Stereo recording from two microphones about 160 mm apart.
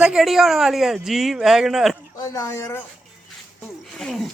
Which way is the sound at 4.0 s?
5° left (ahead or behind).